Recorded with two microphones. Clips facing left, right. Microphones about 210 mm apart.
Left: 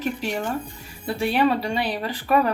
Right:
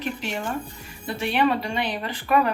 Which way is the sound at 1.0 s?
35° left (ahead or behind).